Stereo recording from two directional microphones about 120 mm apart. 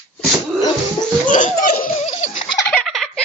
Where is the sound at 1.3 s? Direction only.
90° left.